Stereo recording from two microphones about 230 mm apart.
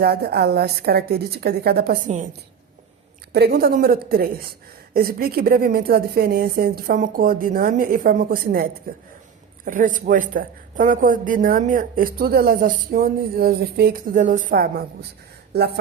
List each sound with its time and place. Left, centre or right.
0.0 s a woman's voice: right
3.3 s speech: right